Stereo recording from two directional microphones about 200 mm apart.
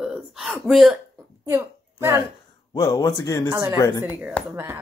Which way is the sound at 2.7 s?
20° left (ahead or behind).